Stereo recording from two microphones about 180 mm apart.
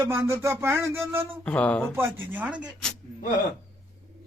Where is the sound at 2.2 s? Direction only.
10° right (ahead or behind).